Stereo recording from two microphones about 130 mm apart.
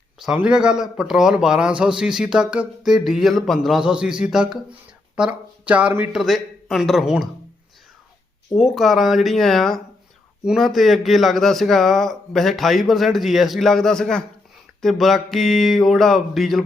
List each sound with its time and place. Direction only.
0.2 s speech: 5° right (ahead or behind)
6.1 s speech: centre (ahead or behind)
8.5 s speech: centre (ahead or behind)